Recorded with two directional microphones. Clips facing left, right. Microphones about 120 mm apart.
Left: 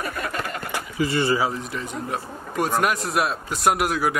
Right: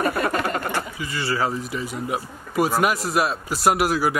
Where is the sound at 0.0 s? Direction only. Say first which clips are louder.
Right 6 dB; 65° right (ahead or behind).